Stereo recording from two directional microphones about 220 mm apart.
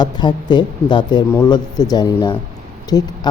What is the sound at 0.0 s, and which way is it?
Speech, 20° left (ahead or behind).